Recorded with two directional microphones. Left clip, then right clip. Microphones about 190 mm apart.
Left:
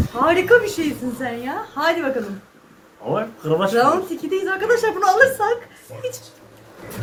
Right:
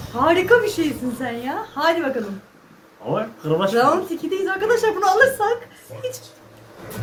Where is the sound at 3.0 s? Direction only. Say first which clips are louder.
Left 1 dB; 15° left (ahead or behind).